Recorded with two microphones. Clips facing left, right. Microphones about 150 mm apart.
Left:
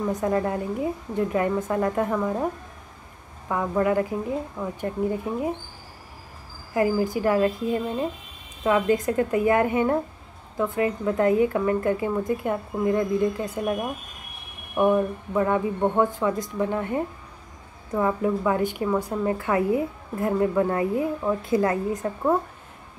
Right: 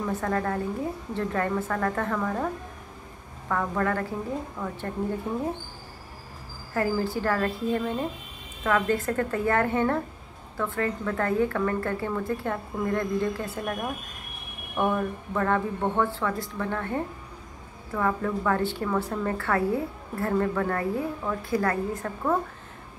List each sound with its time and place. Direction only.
0.1 s a woman's voice: 15° left (ahead or behind)
6.7 s a woman's voice: 10° left (ahead or behind)
14.8 s a woman's voice: 15° left (ahead or behind)